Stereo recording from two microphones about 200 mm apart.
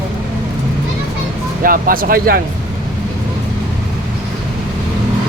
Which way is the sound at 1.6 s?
45° right (ahead or behind).